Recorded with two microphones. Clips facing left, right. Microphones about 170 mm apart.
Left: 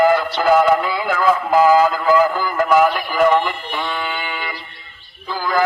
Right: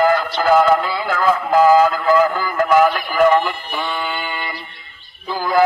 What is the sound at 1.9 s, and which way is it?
Music, 5° left (ahead or behind).